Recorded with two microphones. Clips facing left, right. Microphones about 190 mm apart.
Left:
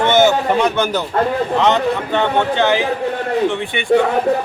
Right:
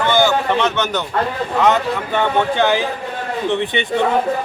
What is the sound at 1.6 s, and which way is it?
A man's voice, 10° right (ahead or behind).